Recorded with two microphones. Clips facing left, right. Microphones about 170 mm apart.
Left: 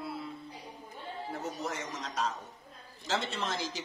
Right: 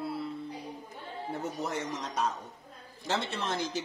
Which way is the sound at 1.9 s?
60° right (ahead or behind).